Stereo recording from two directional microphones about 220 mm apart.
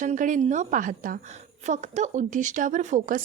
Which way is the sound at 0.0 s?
35° right (ahead or behind).